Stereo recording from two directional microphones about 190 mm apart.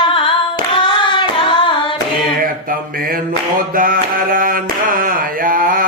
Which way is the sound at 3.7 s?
45° right (ahead or behind).